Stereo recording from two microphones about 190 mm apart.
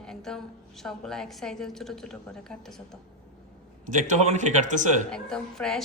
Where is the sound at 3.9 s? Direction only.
40° right (ahead or behind).